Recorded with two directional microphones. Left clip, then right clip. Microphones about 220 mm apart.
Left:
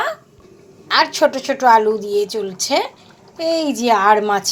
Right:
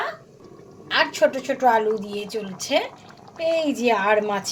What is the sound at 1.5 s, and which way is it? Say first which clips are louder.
Speech: left 6 dB; 15° left (ahead or behind).